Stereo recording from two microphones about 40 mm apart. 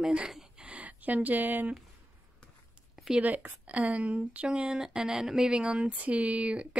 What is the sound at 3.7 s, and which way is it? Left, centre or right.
Speech, right.